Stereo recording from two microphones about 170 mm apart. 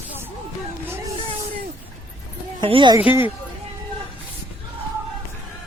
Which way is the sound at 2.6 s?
30° right (ahead or behind).